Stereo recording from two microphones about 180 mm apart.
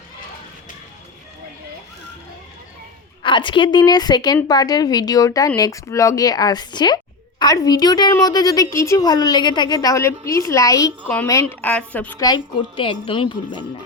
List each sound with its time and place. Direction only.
3.2 s a woman's voice: 25° left (ahead or behind); by 12.2 s 10° left (ahead or behind)
12.2 s speech: 25° left (ahead or behind)